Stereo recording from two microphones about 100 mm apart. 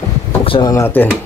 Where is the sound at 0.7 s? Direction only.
20° left (ahead or behind).